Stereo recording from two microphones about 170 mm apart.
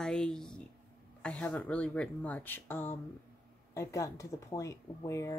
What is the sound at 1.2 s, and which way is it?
Speech, 10° left (ahead or behind).